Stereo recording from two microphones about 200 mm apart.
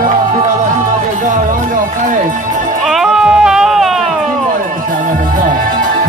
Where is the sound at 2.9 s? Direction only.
Centre (ahead or behind).